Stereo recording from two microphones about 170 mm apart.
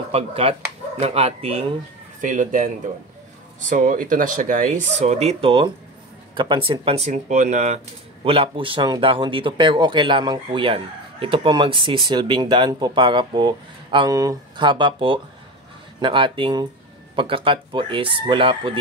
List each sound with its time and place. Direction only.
0.1 s speech: 35° right (ahead or behind)
2.2 s speech: 50° right (ahead or behind); by 18.8 s 30° right (ahead or behind)